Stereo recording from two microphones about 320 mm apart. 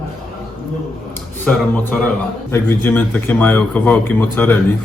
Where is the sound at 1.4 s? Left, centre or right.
Centre.